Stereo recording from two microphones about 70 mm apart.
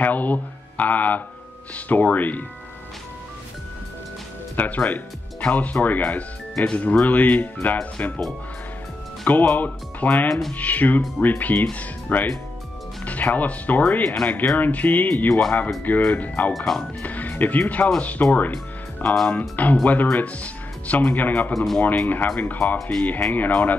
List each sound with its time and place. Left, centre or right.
0.0 s speech: left
4.6 s speech: left
9.3 s speech: left
10.2 s speech: centre
10.5 s speech: left
16.5 s speech: centre
17.0 s speech: left
19.0 s speech: centre
19.5 s speech: left